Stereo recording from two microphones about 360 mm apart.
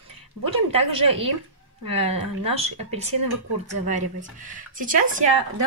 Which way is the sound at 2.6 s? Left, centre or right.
Centre.